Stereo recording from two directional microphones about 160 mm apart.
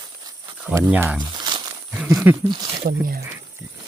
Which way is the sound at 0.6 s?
10° right (ahead or behind).